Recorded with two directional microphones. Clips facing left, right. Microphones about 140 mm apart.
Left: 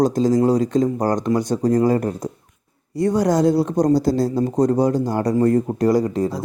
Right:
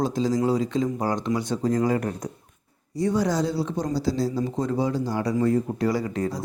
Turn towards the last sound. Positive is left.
turn(degrees=40)  # may be behind; listen again after turning